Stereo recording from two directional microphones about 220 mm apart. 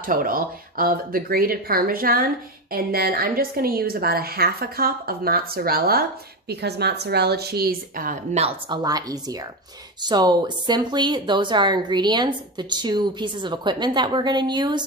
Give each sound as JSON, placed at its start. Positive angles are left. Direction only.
{"t": 0.0, "sound": "a woman's voice", "side_deg": -40}
{"t": 8.6, "sound": "a woman's voice", "side_deg": -15}